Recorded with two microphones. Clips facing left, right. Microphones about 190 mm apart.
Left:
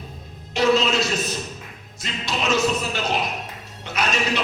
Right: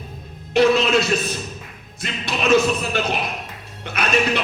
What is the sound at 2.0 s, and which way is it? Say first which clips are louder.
Music: right 2 dB; 55° right (ahead or behind).